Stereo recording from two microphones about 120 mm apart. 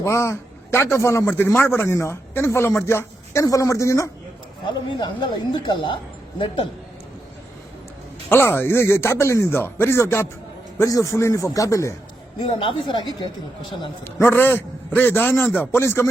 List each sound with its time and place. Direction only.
0.0 s a man's voice: 20° left (ahead or behind)
4.6 s speech: 40° left (ahead or behind)
8.3 s a man's voice: 20° left (ahead or behind)
12.5 s speech: 45° left (ahead or behind)
14.0 s a man's voice: 20° left (ahead or behind)